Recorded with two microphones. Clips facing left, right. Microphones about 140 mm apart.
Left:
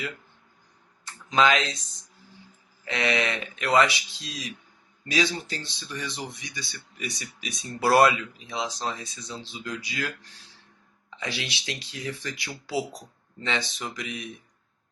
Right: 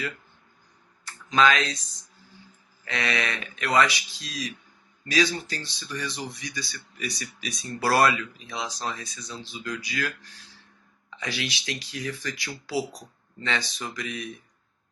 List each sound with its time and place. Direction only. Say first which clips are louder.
1.0 s speech: even; 20° left (ahead or behind)
2.8 s speech: left 3 dB; 20° left (ahead or behind)
11.2 s speech: right 1 dB; 25° left (ahead or behind)